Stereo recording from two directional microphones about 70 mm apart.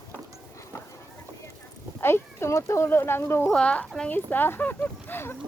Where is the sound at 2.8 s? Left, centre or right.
Left.